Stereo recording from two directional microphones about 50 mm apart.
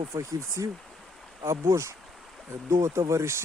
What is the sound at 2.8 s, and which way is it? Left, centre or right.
Speech, right.